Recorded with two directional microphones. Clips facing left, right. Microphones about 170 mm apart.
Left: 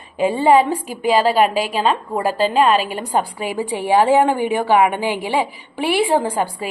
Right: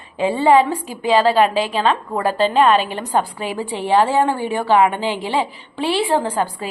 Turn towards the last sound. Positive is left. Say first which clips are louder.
# even
turn(degrees=10)  # may be behind; listen again after turning